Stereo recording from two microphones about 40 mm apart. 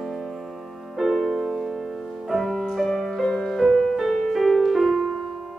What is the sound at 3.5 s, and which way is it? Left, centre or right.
Music, centre.